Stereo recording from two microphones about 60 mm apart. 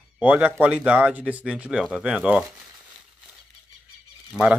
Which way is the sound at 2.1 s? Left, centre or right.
Right.